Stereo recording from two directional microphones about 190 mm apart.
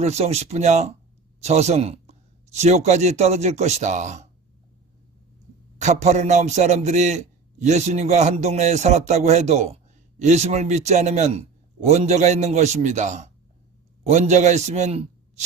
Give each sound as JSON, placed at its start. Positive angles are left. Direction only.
{"t": 0.0, "sound": "a man's voice", "side_deg": -35}
{"t": 5.8, "sound": "a man's voice", "side_deg": -35}